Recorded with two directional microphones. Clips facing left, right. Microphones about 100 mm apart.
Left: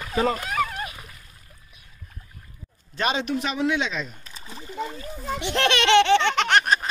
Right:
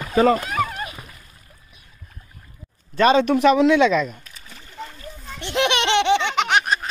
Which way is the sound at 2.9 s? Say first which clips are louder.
Right 10 dB; 50° right (ahead or behind).